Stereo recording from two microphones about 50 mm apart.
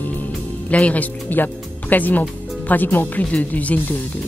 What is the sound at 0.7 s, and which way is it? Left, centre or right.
Speech, left.